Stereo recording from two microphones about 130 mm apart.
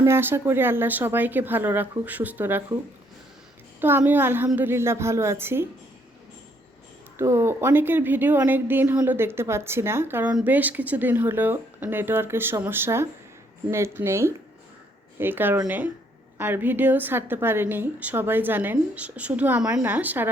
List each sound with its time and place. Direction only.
0.0 s a woman's voice: 20° right (ahead or behind)
3.8 s a woman's voice: 15° right (ahead or behind)
7.2 s a woman's voice: 20° right (ahead or behind)